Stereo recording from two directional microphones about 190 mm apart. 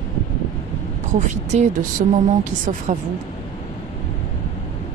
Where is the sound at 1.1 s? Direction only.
40° right (ahead or behind).